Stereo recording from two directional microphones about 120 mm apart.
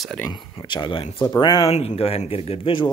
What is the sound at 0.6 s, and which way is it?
Speech, 40° left (ahead or behind).